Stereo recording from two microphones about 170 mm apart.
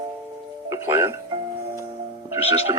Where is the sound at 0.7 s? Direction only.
15° right (ahead or behind).